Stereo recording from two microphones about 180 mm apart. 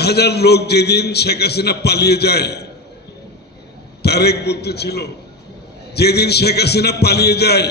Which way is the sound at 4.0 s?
65° left (ahead or behind).